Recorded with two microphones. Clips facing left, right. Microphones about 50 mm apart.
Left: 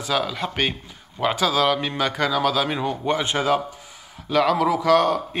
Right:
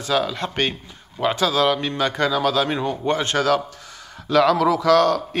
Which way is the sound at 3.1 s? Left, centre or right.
Centre.